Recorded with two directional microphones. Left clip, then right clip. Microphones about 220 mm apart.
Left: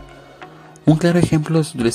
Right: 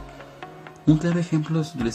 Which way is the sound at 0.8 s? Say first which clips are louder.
Left 7 dB; 45° left (ahead or behind).